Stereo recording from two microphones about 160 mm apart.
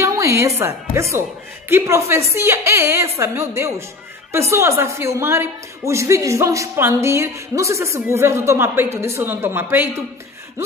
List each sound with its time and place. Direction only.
0.0 s a woman's voice: 20° right (ahead or behind)